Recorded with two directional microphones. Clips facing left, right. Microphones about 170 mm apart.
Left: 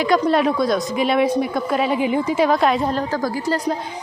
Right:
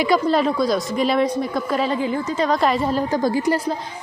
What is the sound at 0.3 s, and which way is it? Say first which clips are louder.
A woman's voice: left 1 dB; centre (ahead or behind).